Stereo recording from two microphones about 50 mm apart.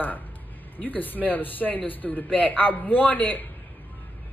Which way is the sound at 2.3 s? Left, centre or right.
Left.